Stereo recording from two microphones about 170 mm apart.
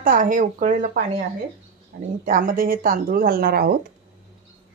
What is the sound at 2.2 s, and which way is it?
Speech, 55° right (ahead or behind).